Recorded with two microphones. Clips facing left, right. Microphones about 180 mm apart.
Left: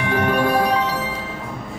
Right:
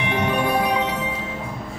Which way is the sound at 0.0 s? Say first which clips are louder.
Left 3 dB; 20° right (ahead or behind).